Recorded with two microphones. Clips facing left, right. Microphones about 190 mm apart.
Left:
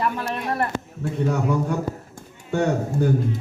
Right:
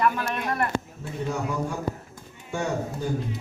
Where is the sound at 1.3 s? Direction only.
60° left (ahead or behind).